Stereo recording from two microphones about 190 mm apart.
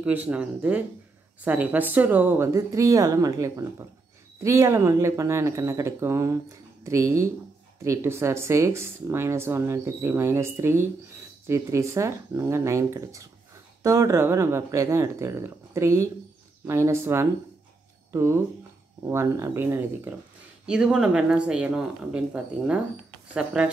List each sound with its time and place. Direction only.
0.0 s speech: 10° right (ahead or behind)